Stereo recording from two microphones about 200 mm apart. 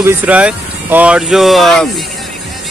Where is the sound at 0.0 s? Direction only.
10° right (ahead or behind).